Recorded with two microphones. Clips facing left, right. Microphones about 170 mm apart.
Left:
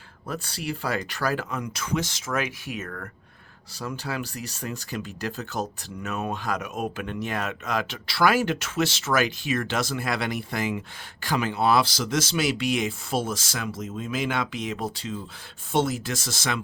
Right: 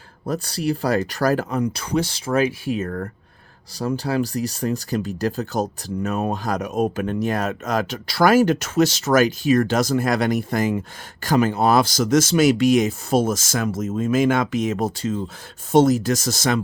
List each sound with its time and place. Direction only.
0.3 s speech: 40° right (ahead or behind)